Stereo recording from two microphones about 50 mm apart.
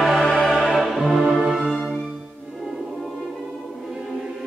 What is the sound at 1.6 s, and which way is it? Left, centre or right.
Music, centre.